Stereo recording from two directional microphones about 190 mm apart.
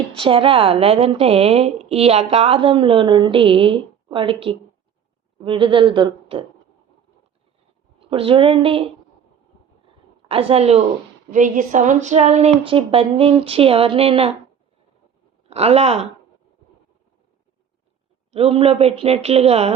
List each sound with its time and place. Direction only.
0.2 s a woman's voice: 30° right (ahead or behind)
7.9 s a woman's voice: 30° right (ahead or behind)
10.2 s speech: 30° right (ahead or behind)
15.4 s speech: 35° right (ahead or behind)
18.3 s speech: 30° right (ahead or behind)